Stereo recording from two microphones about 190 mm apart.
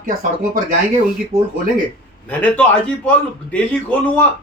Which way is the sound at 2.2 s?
5° left (ahead or behind).